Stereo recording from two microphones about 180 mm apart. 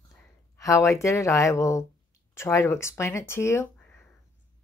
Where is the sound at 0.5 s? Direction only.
15° left (ahead or behind).